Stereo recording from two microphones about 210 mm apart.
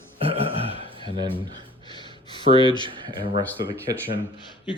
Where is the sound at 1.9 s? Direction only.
20° left (ahead or behind).